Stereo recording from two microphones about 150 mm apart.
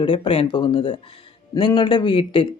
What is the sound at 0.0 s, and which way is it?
Speech, 35° left (ahead or behind).